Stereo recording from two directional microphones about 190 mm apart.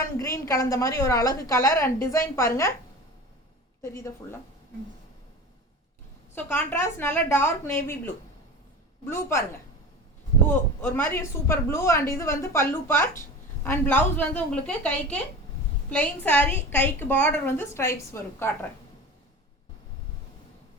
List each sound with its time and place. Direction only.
0.0 s a woman's voice: 15° left (ahead or behind)
3.8 s a woman's voice: 15° left (ahead or behind)
6.3 s a woman's voice: 10° left (ahead or behind)
10.8 s a woman's voice: 10° left (ahead or behind)